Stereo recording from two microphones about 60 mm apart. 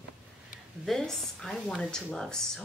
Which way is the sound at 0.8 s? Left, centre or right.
Centre.